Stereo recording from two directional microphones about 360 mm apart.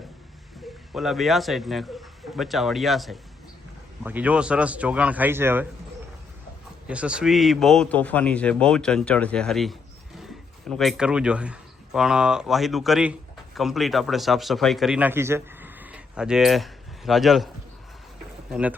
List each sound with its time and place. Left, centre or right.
0.9 s a man's voice: centre
6.8 s a man's voice: centre
18.5 s a man's voice: centre